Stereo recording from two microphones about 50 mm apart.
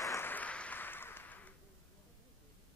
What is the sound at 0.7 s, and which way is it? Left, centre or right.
Applause, left.